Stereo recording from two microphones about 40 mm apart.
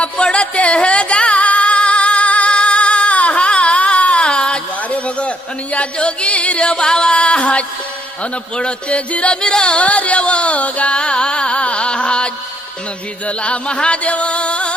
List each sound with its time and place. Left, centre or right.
0.0 s music: left
8.2 s speech: left
9.4 s music: centre